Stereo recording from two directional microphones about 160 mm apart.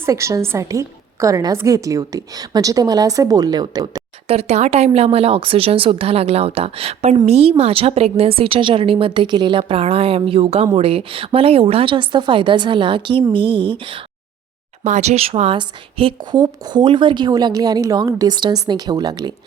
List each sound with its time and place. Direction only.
0.0 s a woman's voice: 20° right (ahead or behind)
4.3 s a woman's voice: 40° right (ahead or behind)
14.8 s a woman's voice: 45° right (ahead or behind); by 19.3 s 25° right (ahead or behind)